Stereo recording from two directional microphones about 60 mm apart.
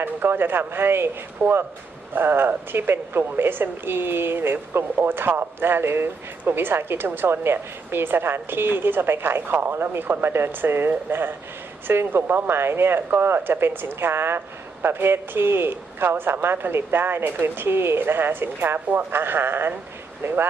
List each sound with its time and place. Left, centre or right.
0.0 s speech: right
1.4 s speech: right
2.1 s speech: right